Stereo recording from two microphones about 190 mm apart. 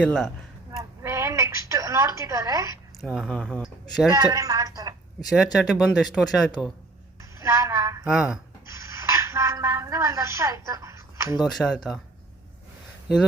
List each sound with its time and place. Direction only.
0.0 s speech: 5° left (ahead or behind)
0.8 s a sound: 15° right (ahead or behind)
3.0 s speech: centre (ahead or behind)
4.1 s a woman's voice: 20° right (ahead or behind)
5.3 s speech: centre (ahead or behind)
7.4 s a sound: 15° right (ahead or behind)
8.1 s speech: 5° right (ahead or behind)
8.7 s a sound: 15° right (ahead or behind)
11.4 s speech: centre (ahead or behind)